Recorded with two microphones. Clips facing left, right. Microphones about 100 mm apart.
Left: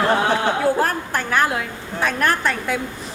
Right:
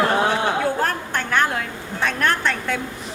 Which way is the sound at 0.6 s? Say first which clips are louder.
Left 3 dB; 5° left (ahead or behind).